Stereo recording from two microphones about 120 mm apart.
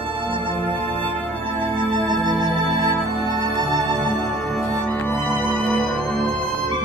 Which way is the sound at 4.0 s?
15° left (ahead or behind).